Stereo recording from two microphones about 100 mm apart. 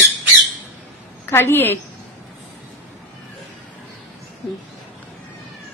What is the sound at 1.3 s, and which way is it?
Speech, 25° left (ahead or behind).